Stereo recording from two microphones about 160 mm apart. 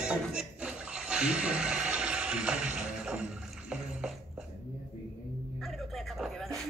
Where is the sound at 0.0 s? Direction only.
5° right (ahead or behind).